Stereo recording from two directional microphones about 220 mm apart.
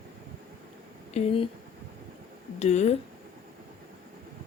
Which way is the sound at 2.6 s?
30° left (ahead or behind).